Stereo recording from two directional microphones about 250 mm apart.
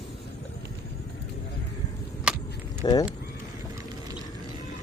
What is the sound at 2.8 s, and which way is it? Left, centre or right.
Speech, centre.